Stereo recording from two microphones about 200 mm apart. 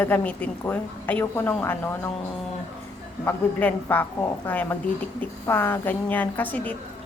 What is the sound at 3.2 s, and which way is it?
A woman's voice, 10° left (ahead or behind).